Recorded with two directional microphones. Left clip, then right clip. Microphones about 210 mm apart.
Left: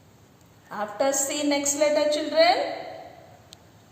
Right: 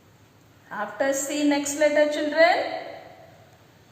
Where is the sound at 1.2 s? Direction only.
40° left (ahead or behind).